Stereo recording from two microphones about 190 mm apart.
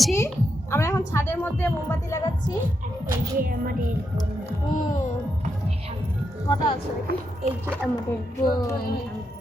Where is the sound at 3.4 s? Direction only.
50° right (ahead or behind).